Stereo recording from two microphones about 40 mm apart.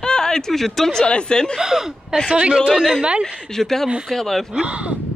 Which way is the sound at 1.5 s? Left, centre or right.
Centre.